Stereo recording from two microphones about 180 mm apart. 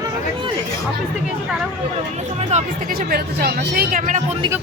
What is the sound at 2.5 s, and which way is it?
Speech, 40° right (ahead or behind).